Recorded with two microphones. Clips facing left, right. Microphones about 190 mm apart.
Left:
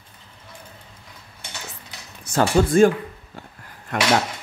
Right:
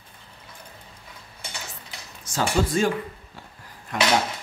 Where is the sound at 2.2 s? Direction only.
55° left (ahead or behind).